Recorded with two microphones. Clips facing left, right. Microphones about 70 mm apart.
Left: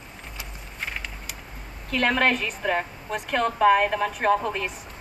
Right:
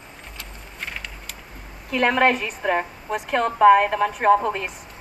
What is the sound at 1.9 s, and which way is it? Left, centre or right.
A woman's voice, centre.